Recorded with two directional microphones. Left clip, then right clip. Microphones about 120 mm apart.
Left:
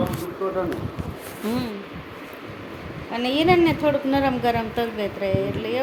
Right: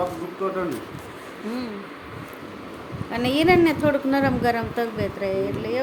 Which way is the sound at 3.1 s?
5° right (ahead or behind).